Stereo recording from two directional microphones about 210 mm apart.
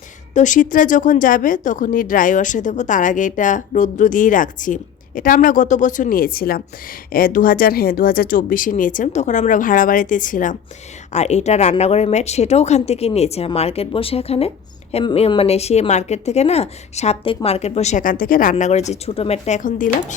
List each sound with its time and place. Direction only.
0.3 s speech: 35° left (ahead or behind)